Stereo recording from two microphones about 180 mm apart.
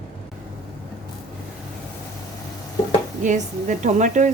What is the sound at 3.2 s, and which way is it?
A woman's voice, 45° right (ahead or behind).